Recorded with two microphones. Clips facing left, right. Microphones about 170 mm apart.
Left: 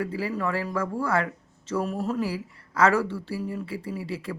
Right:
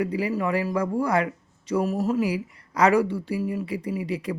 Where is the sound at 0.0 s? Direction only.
15° right (ahead or behind).